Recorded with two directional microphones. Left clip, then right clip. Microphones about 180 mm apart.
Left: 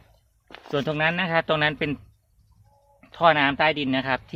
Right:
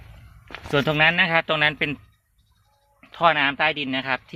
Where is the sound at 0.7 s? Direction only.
10° right (ahead or behind).